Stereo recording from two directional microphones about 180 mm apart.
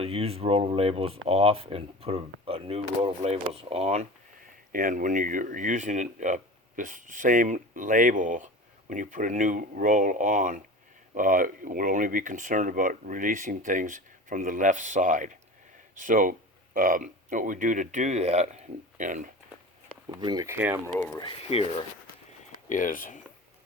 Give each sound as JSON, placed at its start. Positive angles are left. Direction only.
{"t": 0.0, "sound": "speech", "side_deg": -35}
{"t": 4.7, "sound": "speech", "side_deg": -50}
{"t": 20.1, "sound": "speech", "side_deg": -20}
{"t": 20.6, "sound": "speech", "side_deg": -10}
{"t": 21.2, "sound": "speech", "side_deg": 30}
{"t": 22.7, "sound": "speech", "side_deg": 45}